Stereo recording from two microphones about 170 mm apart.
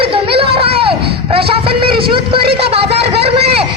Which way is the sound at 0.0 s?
30° right (ahead or behind).